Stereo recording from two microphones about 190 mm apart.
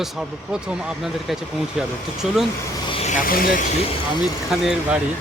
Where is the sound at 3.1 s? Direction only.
45° left (ahead or behind).